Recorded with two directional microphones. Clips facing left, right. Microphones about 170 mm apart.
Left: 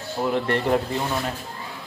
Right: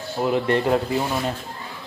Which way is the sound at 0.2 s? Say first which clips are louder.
Right 2 dB; 10° right (ahead or behind).